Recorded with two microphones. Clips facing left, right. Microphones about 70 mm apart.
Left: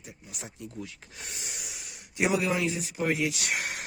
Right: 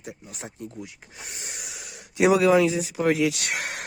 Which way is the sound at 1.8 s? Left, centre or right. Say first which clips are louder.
Right 7 dB; right.